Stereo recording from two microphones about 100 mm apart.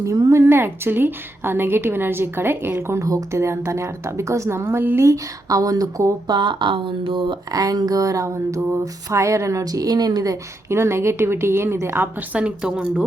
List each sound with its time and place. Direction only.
0.0 s a woman's voice: 35° right (ahead or behind)
5.0 s a sound: 35° right (ahead or behind)
6.3 s speech: 50° right (ahead or behind)
7.6 s a sound: 35° right (ahead or behind)
10.7 s a woman's voice: 25° right (ahead or behind)
12.3 s speech: 10° right (ahead or behind)